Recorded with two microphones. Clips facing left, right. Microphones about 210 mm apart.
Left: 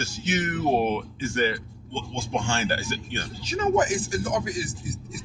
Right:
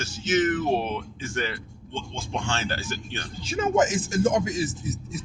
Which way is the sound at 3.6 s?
20° right (ahead or behind).